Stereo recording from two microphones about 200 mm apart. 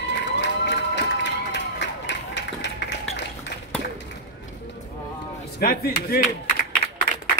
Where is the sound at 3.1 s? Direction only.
65° left (ahead or behind).